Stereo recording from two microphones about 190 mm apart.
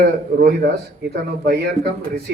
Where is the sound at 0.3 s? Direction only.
60° right (ahead or behind).